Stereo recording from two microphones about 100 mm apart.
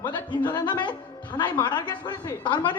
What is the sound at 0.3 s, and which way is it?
A man's voice, 50° left (ahead or behind).